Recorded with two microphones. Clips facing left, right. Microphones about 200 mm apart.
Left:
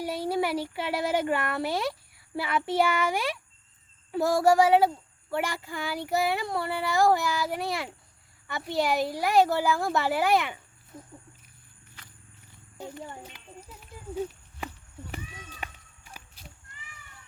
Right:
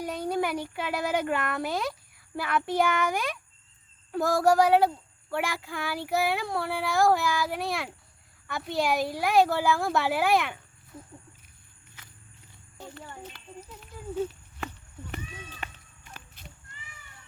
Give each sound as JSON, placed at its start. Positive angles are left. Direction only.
{"t": 0.0, "sound": "a child's voice", "side_deg": 5}
{"t": 4.1, "sound": "child singing", "side_deg": 0}
{"t": 12.8, "sound": "a sound", "side_deg": 15}